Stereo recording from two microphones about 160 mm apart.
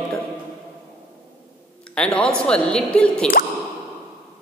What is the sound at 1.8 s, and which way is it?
A man's voice, 5° left (ahead or behind).